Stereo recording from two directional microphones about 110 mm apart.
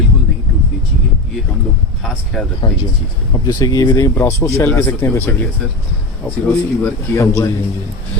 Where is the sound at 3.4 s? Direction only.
35° left (ahead or behind).